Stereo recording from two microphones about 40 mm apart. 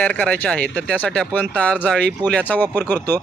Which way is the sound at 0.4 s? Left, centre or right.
Left.